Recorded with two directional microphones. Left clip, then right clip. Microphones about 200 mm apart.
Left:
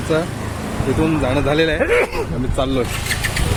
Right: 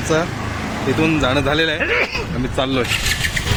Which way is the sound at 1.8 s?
55° left (ahead or behind).